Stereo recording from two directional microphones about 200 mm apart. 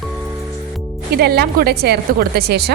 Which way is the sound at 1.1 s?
50° right (ahead or behind).